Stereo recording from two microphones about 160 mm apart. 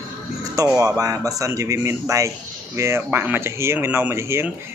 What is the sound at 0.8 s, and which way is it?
Speech, 20° right (ahead or behind).